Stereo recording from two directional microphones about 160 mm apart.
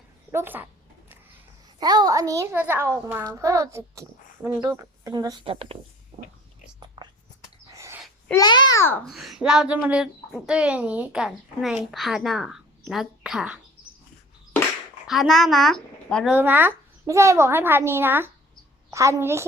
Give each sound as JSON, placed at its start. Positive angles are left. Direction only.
{"t": 0.3, "sound": "speech", "side_deg": -15}
{"t": 1.8, "sound": "a child's voice", "side_deg": -25}
{"t": 7.0, "sound": "whispering", "side_deg": -25}
{"t": 7.7, "sound": "a sound", "side_deg": -15}
{"t": 8.4, "sound": "a child's voice", "side_deg": 25}
{"t": 9.0, "sound": "speech", "side_deg": 0}
{"t": 15.0, "sound": "a woman's voice", "side_deg": 0}
{"t": 16.3, "sound": "a child's voice", "side_deg": -10}